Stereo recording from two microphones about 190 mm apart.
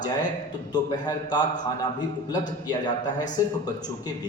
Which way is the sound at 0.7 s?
20° left (ahead or behind).